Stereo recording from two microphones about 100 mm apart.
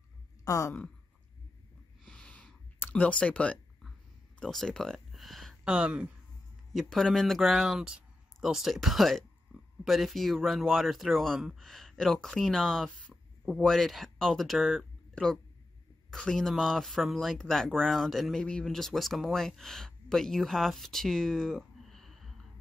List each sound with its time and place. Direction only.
0.5 s speech: 35° left (ahead or behind)
2.0 s a sound: 10° left (ahead or behind)
4.4 s speech: 5° left (ahead or behind)
5.6 s speech: 10° right (ahead or behind)
6.7 s speech: 5° left (ahead or behind)